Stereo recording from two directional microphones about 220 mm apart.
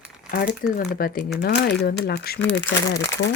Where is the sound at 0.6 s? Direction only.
40° left (ahead or behind).